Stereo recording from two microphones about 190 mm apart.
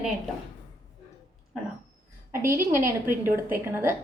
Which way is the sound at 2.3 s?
15° right (ahead or behind).